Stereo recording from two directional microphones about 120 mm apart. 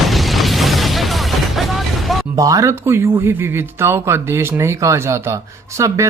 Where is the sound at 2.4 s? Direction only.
30° right (ahead or behind).